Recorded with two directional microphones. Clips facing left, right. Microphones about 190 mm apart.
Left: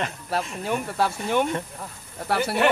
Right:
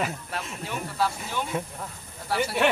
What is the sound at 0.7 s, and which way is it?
Speech, 60° left (ahead or behind).